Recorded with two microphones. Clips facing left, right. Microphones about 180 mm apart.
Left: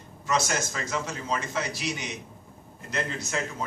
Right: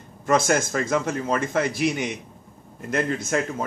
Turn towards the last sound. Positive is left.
turn(degrees=-50)  # may be behind; listen again after turning